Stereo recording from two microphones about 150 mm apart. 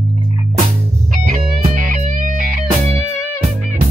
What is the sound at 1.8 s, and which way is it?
Music, 60° right (ahead or behind).